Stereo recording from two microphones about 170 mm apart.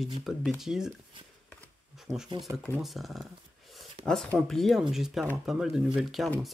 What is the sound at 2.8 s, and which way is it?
Speech, centre (ahead or behind).